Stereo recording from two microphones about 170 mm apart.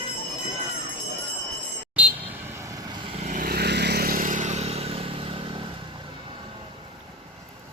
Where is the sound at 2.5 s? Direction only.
20° right (ahead or behind).